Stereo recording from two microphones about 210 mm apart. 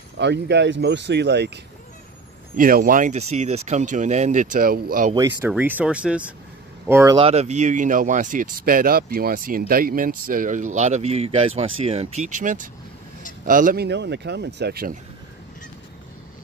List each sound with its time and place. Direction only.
0.2 s speech: 55° right (ahead or behind)
2.5 s speech: 40° right (ahead or behind)
5.1 s speech: 15° right (ahead or behind)
7.2 s speech: 30° right (ahead or behind); by 15.0 s 45° right (ahead or behind)